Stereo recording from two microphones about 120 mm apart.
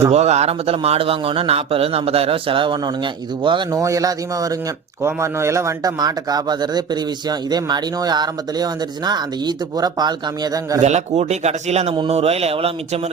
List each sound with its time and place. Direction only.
0.1 s a man's voice: 65° right (ahead or behind); by 10.8 s 35° right (ahead or behind)
10.8 s speech: 75° right (ahead or behind); by 13.0 s 55° right (ahead or behind)